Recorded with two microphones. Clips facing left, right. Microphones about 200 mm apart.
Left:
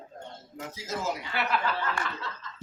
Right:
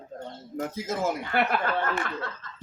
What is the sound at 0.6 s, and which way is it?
Speech, 50° right (ahead or behind).